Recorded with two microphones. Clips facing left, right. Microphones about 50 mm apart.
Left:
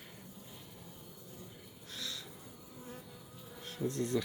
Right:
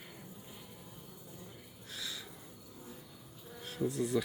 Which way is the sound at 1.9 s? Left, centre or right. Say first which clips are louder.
Even; centre.